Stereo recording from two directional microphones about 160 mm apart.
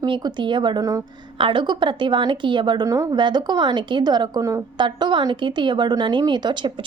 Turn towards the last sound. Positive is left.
turn(degrees=-30)  # may be behind; listen again after turning